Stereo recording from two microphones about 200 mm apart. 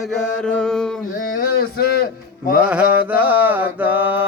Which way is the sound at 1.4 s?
45° left (ahead or behind).